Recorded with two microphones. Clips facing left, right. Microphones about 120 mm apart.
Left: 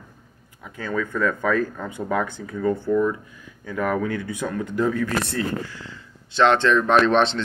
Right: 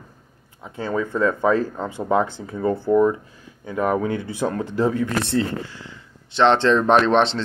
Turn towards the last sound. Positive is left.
turn(degrees=-25)  # may be behind; listen again after turning